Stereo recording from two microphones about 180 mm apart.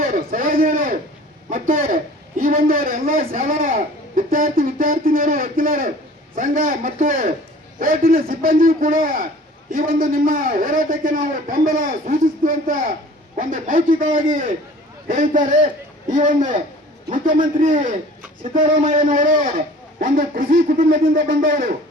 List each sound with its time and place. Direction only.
0.0 s a sound: 50° right (ahead or behind)
2.4 s speech: 50° right (ahead or behind)
17.6 s speech: 45° right (ahead or behind)